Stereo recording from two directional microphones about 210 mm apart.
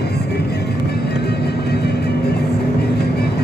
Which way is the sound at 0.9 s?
50° left (ahead or behind).